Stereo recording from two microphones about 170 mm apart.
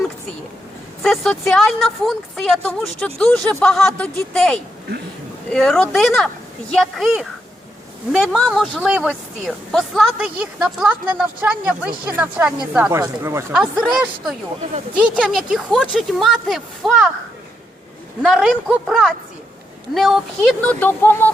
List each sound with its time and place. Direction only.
1.0 s speech: centre (ahead or behind); by 13.4 s 15° right (ahead or behind)
13.5 s speech: centre (ahead or behind)
18.2 s speech: centre (ahead or behind)